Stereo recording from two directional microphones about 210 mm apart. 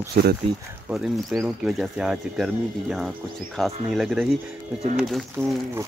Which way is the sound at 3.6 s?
Centre (ahead or behind).